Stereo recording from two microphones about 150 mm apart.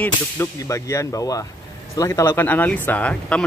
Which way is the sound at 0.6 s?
20° left (ahead or behind).